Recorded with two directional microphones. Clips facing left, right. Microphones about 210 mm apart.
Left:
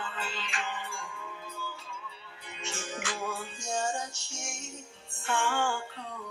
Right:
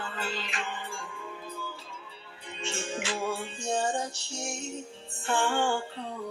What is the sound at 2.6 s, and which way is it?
Music, 30° right (ahead or behind).